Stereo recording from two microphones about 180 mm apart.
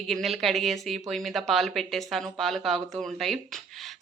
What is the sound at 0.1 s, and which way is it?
A woman's voice, centre (ahead or behind).